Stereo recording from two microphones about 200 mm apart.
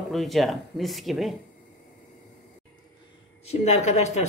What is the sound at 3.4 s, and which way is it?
Speech, 35° left (ahead or behind).